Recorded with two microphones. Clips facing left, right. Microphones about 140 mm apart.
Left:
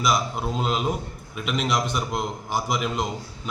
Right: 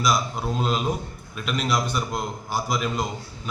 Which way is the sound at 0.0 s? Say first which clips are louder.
Even; 10° left (ahead or behind).